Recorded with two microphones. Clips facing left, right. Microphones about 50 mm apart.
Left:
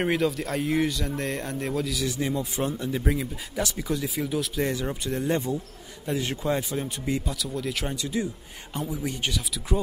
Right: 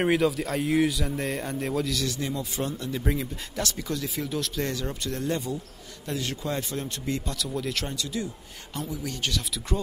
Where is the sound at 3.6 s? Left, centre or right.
Centre.